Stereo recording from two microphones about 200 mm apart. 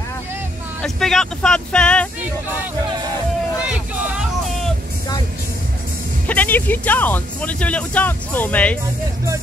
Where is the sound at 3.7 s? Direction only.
5° right (ahead or behind).